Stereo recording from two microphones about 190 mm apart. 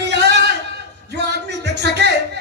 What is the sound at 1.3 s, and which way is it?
Music, 60° right (ahead or behind).